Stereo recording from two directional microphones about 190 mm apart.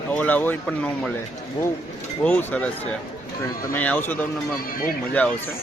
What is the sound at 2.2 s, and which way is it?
Speech, 10° left (ahead or behind).